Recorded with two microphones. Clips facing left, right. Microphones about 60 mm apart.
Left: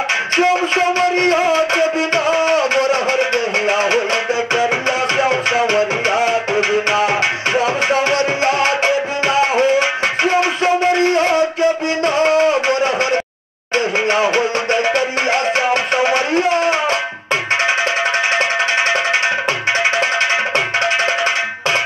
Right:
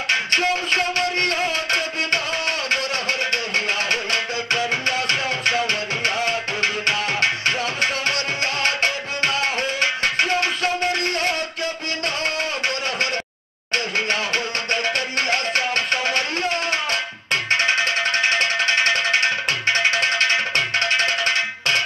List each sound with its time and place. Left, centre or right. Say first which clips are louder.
0.4 s music: left 7 dB; centre
7.5 s tabla: left 8 dB; left
13.7 s music: left 7 dB; centre
18.3 s music: left 4 dB; centre